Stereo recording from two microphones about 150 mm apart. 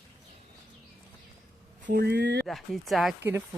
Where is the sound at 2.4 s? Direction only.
Centre (ahead or behind).